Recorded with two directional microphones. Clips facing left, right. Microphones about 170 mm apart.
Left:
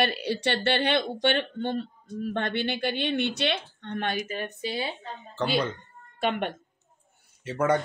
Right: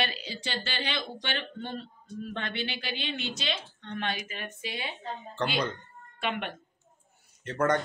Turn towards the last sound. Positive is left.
turn(degrees=10)  # may be behind; listen again after turning